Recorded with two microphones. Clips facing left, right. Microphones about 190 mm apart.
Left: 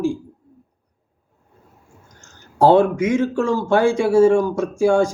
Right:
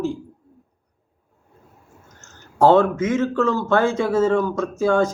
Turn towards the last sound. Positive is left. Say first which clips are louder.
# left 2 dB
turn(degrees=15)  # may be behind; listen again after turning